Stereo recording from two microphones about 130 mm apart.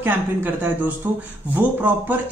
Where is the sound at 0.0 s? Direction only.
15° right (ahead or behind).